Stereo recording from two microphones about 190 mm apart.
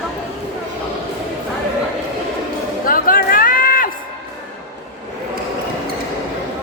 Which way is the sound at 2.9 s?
45° left (ahead or behind).